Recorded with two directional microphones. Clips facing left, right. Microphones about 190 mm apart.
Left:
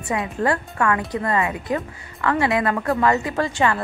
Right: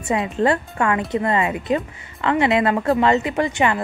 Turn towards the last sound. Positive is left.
turn(degrees=-20)  # may be behind; listen again after turning